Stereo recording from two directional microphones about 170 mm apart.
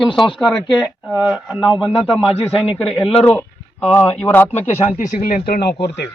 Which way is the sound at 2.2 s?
35° left (ahead or behind).